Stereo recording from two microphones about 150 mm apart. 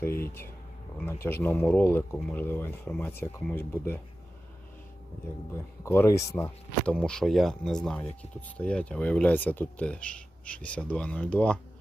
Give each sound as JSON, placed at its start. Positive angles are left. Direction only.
{"t": 0.0, "sound": "speech", "side_deg": 15}
{"t": 5.8, "sound": "speech", "side_deg": 15}
{"t": 6.8, "sound": "speech", "side_deg": 5}